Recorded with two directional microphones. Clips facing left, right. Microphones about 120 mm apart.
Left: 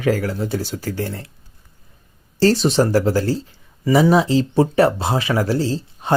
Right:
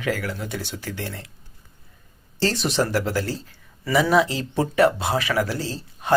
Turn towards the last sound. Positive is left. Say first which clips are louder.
# left 7 dB
turn(degrees=30)  # may be behind; listen again after turning